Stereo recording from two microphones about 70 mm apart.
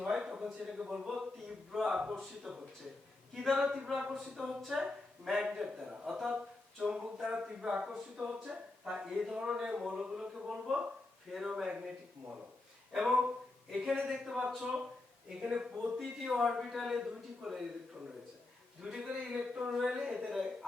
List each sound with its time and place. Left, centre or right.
0.0 s a man's voice: centre
12.9 s speech: centre
16.0 s speech: centre
18.8 s speech: centre